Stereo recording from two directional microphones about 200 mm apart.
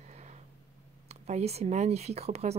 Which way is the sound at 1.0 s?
35° right (ahead or behind).